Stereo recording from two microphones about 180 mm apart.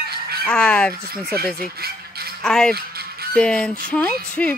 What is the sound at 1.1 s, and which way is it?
Speech, 60° right (ahead or behind).